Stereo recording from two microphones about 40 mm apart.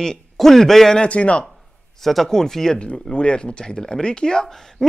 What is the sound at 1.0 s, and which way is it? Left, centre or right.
Speech, left.